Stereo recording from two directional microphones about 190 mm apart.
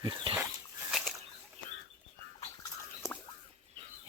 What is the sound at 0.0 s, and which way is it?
Dog, 25° right (ahead or behind).